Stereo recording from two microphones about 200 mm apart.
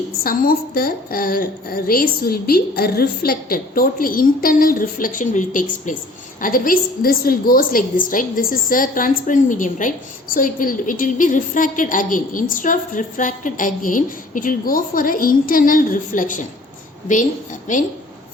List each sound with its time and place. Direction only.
0.2 s a woman's voice: 50° left (ahead or behind)